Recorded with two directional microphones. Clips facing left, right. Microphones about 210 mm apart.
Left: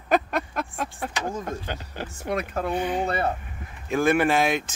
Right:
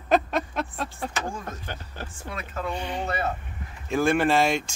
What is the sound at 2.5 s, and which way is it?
Speech, 55° left (ahead or behind).